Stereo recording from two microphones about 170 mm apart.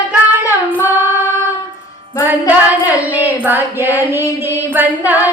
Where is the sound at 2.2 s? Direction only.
10° right (ahead or behind).